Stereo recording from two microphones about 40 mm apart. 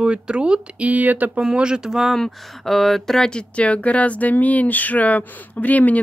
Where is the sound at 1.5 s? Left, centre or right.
Right.